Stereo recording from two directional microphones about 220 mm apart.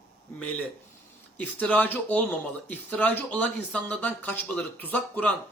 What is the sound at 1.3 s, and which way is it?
Speech, 5° left (ahead or behind).